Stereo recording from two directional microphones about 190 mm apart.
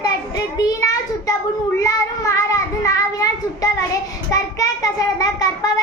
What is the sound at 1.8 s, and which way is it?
Child singing, 20° left (ahead or behind).